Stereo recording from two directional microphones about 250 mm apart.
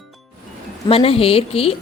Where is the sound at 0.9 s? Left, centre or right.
Left.